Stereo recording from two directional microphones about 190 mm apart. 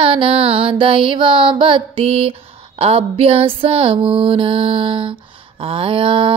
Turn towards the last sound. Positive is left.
turn(degrees=-30)  # may be behind; listen again after turning